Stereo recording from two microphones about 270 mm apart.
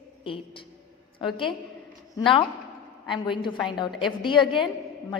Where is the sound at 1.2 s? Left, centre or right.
Centre.